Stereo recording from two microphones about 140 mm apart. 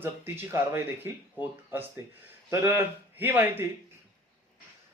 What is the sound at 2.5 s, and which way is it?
Speech, 20° right (ahead or behind).